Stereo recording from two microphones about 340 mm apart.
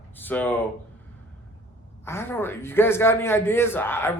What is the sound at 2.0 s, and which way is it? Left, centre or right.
A man's voice, centre.